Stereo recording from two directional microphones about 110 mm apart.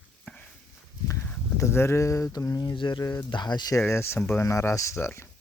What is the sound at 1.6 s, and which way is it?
Speech, 25° left (ahead or behind).